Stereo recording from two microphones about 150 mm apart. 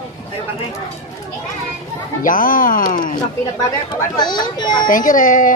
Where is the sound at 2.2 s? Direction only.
65° left (ahead or behind).